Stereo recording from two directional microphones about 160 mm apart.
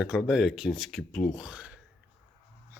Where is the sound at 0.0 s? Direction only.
Centre (ahead or behind).